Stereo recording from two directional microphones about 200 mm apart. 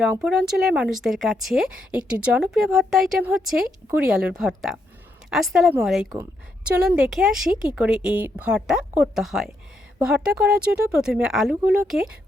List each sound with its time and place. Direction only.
0.0 s speech: 5° right (ahead or behind)